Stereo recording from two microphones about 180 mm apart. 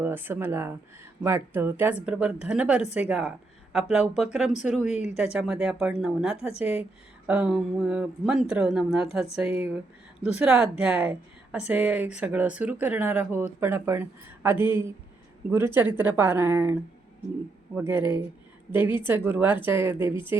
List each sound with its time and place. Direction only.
0.0 s speech: 10° right (ahead or behind)
4.9 s speech: 40° left (ahead or behind)
5.2 s speech: 5° right (ahead or behind)
17.7 s speech: 10° right (ahead or behind)